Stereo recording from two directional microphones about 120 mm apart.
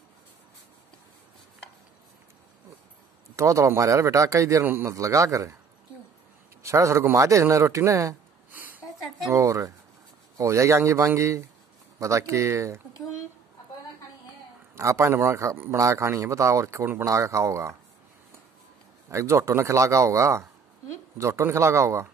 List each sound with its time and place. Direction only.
3.3 s a man's voice: 25° right (ahead or behind)
6.6 s a man's voice: 25° right (ahead or behind)
8.5 s a sound: 15° right (ahead or behind)
9.3 s a man's voice: 25° right (ahead or behind)
14.8 s a man's voice: 25° right (ahead or behind)
19.0 s a man's voice: 25° right (ahead or behind)